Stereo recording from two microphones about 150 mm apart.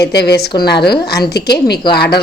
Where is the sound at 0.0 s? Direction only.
90° left.